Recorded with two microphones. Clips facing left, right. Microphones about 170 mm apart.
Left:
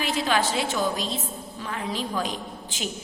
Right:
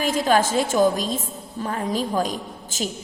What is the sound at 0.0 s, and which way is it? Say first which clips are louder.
A woman's voice: right 5 dB; 45° right (ahead or behind).